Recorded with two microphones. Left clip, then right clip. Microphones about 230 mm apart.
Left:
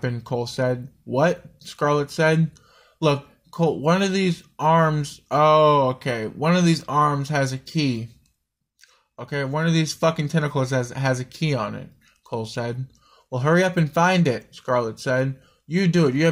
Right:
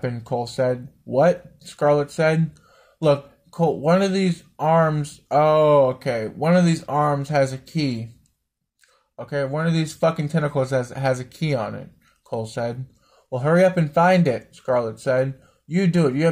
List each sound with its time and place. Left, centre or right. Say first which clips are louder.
0.0 s speech: right 1 dB; left
9.1 s speech: right 2 dB; left